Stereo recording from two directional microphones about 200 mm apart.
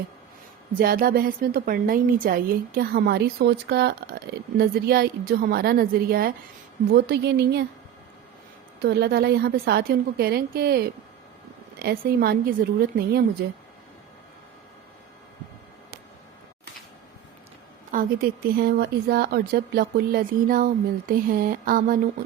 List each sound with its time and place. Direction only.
0.8 s a woman's voice: 45° right (ahead or behind)
8.8 s a woman's voice: 55° right (ahead or behind)
17.9 s a woman's voice: 50° right (ahead or behind)